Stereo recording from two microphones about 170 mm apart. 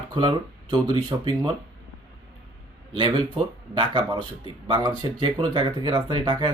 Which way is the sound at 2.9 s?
25° right (ahead or behind).